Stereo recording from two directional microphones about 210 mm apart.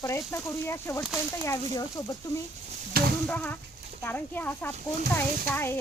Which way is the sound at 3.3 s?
5° left (ahead or behind).